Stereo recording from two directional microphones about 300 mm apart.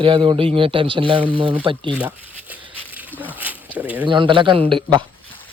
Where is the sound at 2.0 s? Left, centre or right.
Centre.